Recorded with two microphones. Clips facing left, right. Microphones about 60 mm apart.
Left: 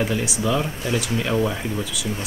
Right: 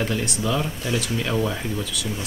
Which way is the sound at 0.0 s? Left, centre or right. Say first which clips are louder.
Left 2 dB; centre.